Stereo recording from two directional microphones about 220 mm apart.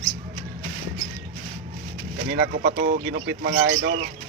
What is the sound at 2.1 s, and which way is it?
Speech, 50° right (ahead or behind).